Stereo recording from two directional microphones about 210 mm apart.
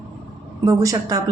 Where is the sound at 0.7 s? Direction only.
15° right (ahead or behind).